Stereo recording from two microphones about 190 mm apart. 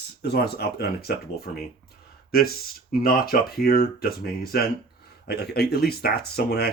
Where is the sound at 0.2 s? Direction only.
60° left (ahead or behind).